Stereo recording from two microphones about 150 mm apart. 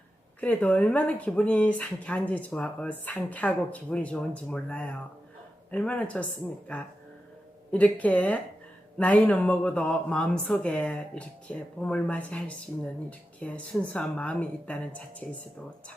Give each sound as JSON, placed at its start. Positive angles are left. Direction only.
{"t": 0.3, "sound": "speech", "side_deg": 10}